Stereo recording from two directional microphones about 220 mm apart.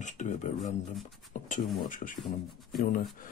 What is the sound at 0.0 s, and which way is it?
Speech, 35° left (ahead or behind).